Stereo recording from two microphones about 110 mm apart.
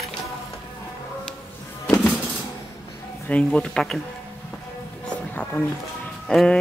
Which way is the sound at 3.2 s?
10° left (ahead or behind).